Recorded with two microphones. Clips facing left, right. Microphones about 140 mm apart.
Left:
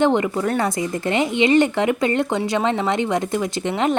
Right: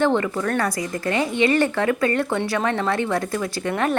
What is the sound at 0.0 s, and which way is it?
Speech, 20° left (ahead or behind).